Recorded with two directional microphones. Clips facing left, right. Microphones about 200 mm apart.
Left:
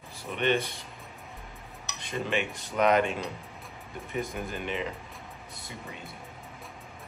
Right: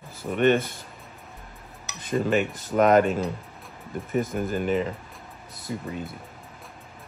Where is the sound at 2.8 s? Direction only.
45° right (ahead or behind).